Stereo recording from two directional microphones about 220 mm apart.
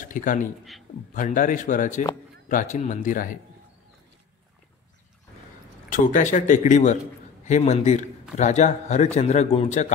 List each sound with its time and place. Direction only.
0.0 s a man's voice: 40° left (ahead or behind)
5.9 s a man's voice: 35° left (ahead or behind)